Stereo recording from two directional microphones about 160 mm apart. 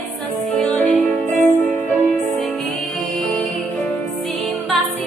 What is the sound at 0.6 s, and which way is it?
Music, centre (ahead or behind).